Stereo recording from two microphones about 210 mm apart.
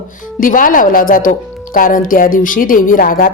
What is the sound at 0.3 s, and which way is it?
A woman's voice, 40° left (ahead or behind).